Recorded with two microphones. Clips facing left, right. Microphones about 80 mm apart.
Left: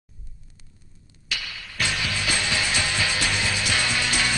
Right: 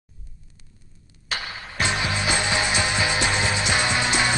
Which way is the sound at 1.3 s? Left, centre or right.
Right.